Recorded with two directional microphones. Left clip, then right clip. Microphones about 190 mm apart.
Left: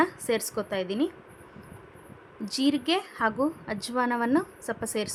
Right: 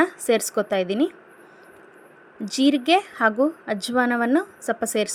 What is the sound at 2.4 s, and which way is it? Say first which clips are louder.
A woman's voice: right 6 dB; 15° right (ahead or behind).